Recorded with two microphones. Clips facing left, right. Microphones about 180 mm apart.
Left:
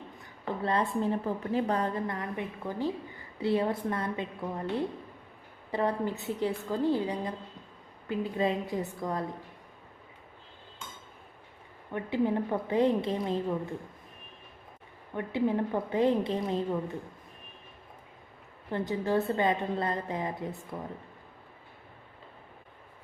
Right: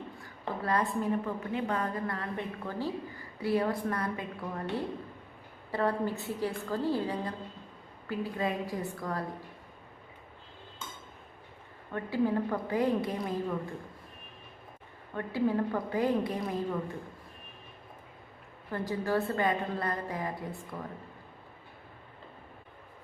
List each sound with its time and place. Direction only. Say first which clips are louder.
0.2 s a woman's voice: left 4 dB; 25° left (ahead or behind)
5.7 s a woman's voice: even; 20° left (ahead or behind)
11.9 s a woman's voice: left 1 dB; 20° left (ahead or behind)
15.1 s a woman's voice: left 1 dB; 20° left (ahead or behind)
18.7 s a woman's voice: left 2 dB; 20° left (ahead or behind)